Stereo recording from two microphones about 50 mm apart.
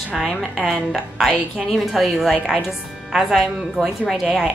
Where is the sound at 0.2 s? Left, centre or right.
Centre.